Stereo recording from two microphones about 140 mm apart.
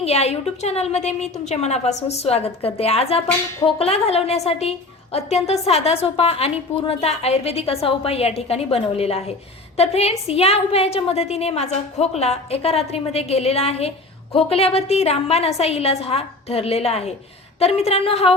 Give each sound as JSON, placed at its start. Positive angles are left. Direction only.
{"t": 0.0, "sound": "a woman's voice", "side_deg": 50}